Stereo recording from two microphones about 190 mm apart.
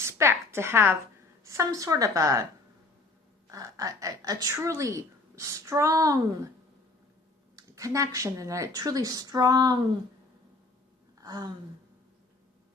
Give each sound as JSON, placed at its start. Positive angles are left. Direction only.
{"t": 0.0, "sound": "a woman's voice", "side_deg": -15}
{"t": 7.5, "sound": "a woman's voice", "side_deg": -15}
{"t": 11.2, "sound": "a sound", "side_deg": -20}